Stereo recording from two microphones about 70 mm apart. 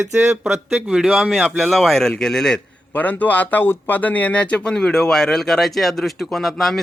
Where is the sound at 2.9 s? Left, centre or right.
Left.